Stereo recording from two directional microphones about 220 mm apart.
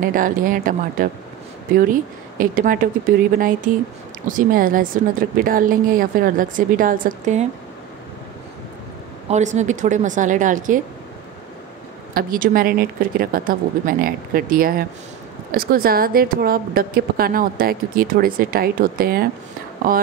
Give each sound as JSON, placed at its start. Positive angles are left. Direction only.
{"t": 0.0, "sound": "a woman's voice", "side_deg": -40}
{"t": 9.3, "sound": "a woman's voice", "side_deg": -30}
{"t": 12.1, "sound": "a woman's voice", "side_deg": -40}